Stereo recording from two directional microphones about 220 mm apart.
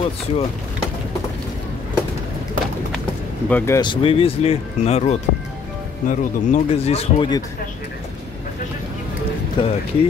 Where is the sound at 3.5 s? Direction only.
10° left (ahead or behind).